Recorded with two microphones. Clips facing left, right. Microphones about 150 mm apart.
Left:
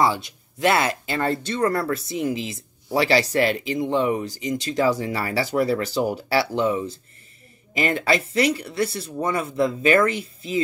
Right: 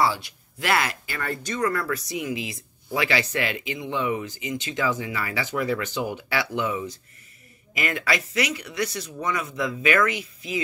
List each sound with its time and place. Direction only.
0.0 s speech: 20° left (ahead or behind)